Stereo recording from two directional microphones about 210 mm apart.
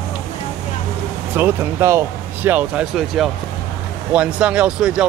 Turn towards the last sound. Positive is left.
turn(degrees=-5)  # may be behind; listen again after turning